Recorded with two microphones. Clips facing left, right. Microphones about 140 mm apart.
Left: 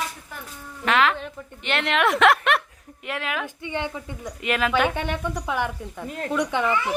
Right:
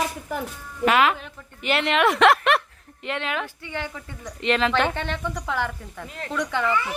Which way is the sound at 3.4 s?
20° left (ahead or behind).